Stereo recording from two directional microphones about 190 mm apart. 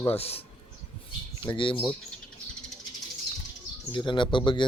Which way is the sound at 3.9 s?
25° left (ahead or behind).